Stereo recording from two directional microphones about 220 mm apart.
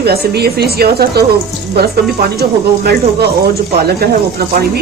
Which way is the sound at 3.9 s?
45° right (ahead or behind).